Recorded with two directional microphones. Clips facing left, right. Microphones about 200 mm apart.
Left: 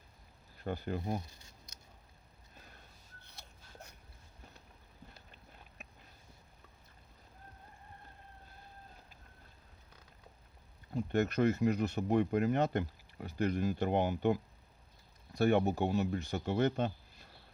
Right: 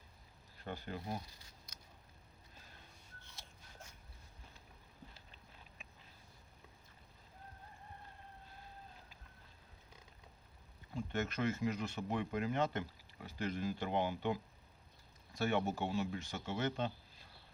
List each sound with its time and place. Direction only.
0.6 s speech: 45° left (ahead or behind)
10.9 s speech: 40° left (ahead or behind); by 13.7 s 55° left (ahead or behind)
13.7 s speech: 45° left (ahead or behind)
15.4 s speech: 40° left (ahead or behind)